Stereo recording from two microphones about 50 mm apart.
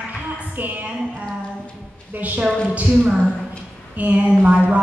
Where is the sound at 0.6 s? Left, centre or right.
Right.